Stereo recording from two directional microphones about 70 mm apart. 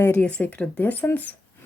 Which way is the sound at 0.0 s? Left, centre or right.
Left.